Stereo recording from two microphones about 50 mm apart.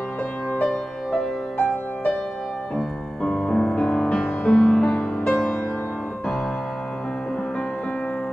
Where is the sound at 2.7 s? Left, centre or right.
Centre.